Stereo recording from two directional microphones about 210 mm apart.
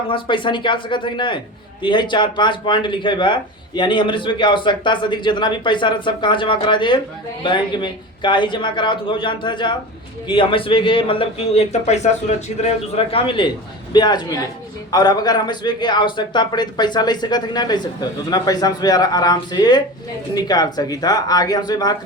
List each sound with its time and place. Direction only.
0.1 s speech: 25° left (ahead or behind)